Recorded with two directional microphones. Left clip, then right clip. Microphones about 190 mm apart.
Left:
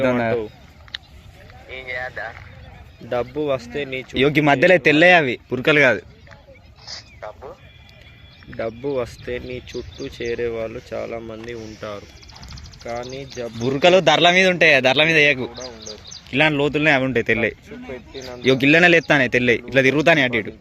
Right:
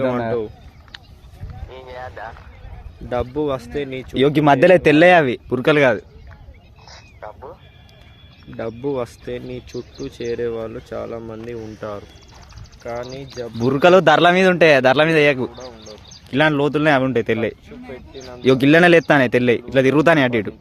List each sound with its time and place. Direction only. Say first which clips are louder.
0.9 s vehicle: left 7 dB; 35° right (ahead or behind)
1.7 s boat: left 5 dB; 40° right (ahead or behind)
2.0 s speech: left 3 dB; 30° right (ahead or behind)
3.1 s speech: even; 55° right (ahead or behind)
4.1 s speech: right 2 dB; 25° right (ahead or behind)
6.8 s a sound: left 2 dB; 30° right (ahead or behind)
8.5 s a man's voice: even; 45° right (ahead or behind)
12.8 s speech: right 1 dB; 25° right (ahead or behind)
13.6 s a man's voice: right 2 dB; 40° right (ahead or behind)
15.4 s speech: even; 15° left (ahead or behind)
16.3 s speech: right 1 dB; 30° right (ahead or behind)
17.7 s speech: left 2 dB; 35° left (ahead or behind)
18.4 s speech: right 1 dB; 30° right (ahead or behind)
20.0 s a man's voice: right 1 dB; 40° right (ahead or behind)